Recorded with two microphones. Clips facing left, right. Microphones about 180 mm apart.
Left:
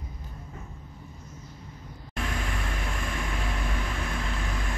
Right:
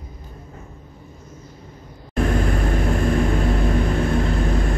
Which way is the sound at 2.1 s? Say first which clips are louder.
Right 13 dB; 45° right (ahead or behind).